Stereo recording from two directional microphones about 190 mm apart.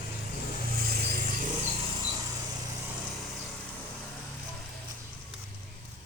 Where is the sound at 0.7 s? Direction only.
55° right (ahead or behind).